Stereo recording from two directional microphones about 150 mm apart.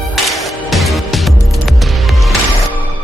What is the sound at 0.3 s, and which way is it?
Music, centre (ahead or behind).